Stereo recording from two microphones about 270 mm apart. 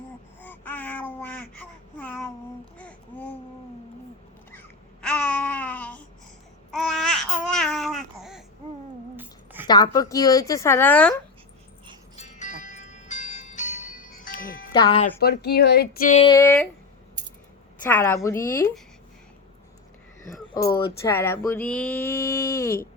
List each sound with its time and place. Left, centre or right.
0.4 s babbling: centre
5.0 s a sound: centre
6.7 s babbling: centre
9.1 s a sound: centre
9.6 s speech: centre
12.1 s music: left
14.7 s speech: centre
15.2 s speech: left
16.2 s speech: centre
17.8 s speech: centre
20.5 s speech: centre